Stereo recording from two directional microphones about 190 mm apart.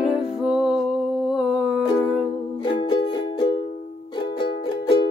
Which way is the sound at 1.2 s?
5° right (ahead or behind).